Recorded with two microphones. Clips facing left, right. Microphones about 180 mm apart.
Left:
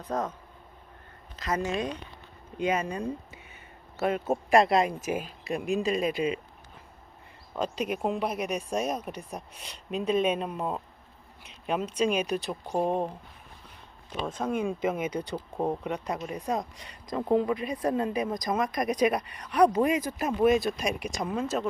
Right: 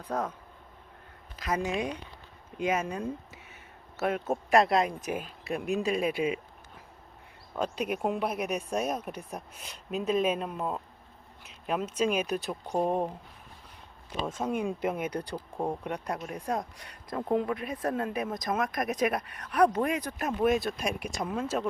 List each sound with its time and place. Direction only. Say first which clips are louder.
0.1 s speech: left 1 dB; 10° right (ahead or behind)
1.4 s speech: left 1 dB; 10° right (ahead or behind)
7.9 s speech: left 1 dB; 5° right (ahead or behind)
14.3 s speech: left 2 dB; 5° right (ahead or behind)
16.7 s speech: left 1 dB; 60° right (ahead or behind)
17.1 s speech: left 3 dB; centre (ahead or behind)